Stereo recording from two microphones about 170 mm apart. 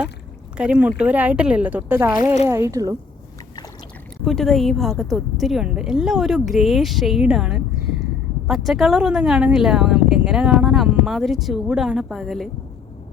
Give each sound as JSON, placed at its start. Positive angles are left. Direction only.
{"t": 0.5, "sound": "speech", "side_deg": -5}
{"t": 4.2, "sound": "speech", "side_deg": 0}